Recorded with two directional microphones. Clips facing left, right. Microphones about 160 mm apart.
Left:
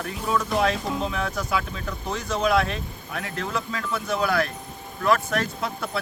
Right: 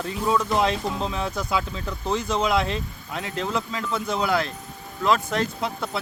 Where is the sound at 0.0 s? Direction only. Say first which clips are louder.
Right 3 dB; 25° right (ahead or behind).